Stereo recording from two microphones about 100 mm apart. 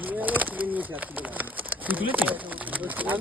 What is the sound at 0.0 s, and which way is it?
Bird, 15° right (ahead or behind).